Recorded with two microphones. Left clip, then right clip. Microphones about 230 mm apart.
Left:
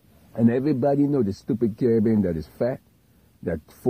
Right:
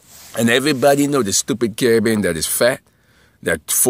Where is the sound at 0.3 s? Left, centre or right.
Centre.